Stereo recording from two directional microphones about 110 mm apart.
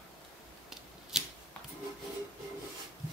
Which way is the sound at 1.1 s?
5° right (ahead or behind).